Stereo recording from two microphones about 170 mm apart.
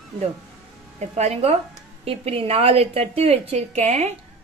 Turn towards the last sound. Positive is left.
turn(degrees=-40)  # may be behind; listen again after turning